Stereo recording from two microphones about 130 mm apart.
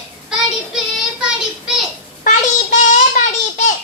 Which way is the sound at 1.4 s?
5° right (ahead or behind).